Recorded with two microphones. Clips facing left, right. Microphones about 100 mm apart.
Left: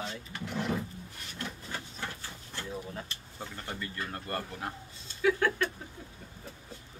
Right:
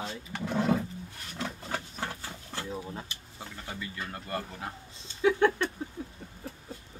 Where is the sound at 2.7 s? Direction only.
20° right (ahead or behind).